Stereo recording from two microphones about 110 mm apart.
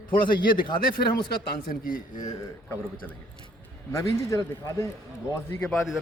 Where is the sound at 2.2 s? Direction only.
35° left (ahead or behind).